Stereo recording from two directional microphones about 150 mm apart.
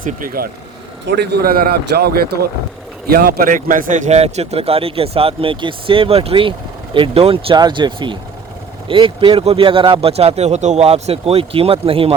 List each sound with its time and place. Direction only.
0.0 s speech: 65° right (ahead or behind)
1.1 s speech: 90° right; by 12.1 s 40° right (ahead or behind)